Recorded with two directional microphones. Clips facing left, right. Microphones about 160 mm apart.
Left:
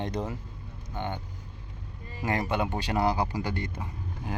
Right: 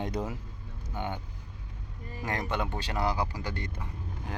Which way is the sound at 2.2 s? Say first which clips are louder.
Left 4 dB; 5° left (ahead or behind).